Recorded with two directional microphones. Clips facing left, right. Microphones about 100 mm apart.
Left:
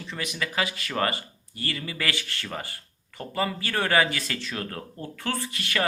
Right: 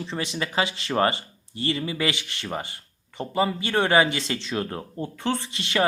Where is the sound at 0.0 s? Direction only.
30° right (ahead or behind).